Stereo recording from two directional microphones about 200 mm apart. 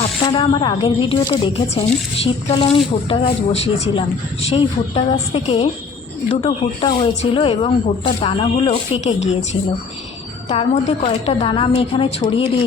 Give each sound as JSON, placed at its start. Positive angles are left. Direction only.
{"t": 0.0, "sound": "a woman's voice", "side_deg": 25}
{"t": 10.5, "sound": "a woman's voice", "side_deg": 30}